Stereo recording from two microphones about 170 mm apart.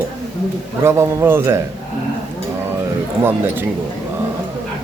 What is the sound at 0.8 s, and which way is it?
Speech, 15° right (ahead or behind).